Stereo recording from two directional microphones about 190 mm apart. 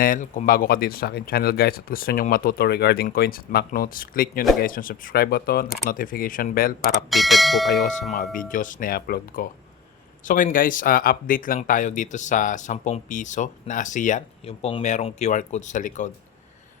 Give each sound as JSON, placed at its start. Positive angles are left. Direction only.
{"t": 0.0, "sound": "speech", "side_deg": 45}
{"t": 7.1, "sound": "speech", "side_deg": 0}
{"t": 8.1, "sound": "speech", "side_deg": 45}